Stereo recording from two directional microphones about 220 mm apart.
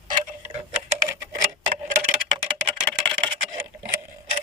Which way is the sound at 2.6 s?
25° right (ahead or behind).